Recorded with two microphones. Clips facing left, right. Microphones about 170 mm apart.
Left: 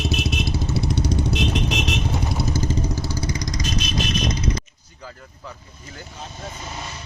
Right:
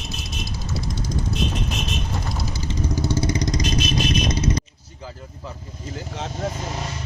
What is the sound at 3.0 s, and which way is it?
Vehicle, 25° right (ahead or behind).